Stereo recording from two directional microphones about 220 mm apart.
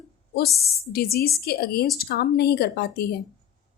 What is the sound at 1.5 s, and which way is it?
A woman's voice, 45° left (ahead or behind).